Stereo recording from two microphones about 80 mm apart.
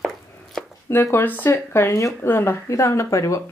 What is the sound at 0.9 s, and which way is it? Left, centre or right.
Speech, left.